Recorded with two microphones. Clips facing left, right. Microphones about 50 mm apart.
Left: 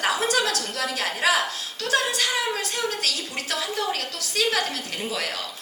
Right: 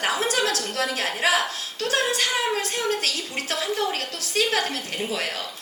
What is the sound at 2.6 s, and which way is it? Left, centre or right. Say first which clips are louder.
A woman's voice: right 2 dB; right.